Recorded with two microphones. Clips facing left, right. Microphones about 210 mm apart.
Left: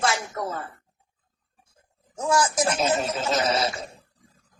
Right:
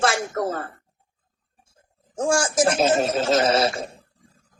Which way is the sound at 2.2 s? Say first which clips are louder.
Right 3 dB; 50° right (ahead or behind).